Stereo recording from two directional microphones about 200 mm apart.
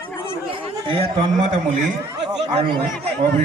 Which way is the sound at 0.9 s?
25° right (ahead or behind).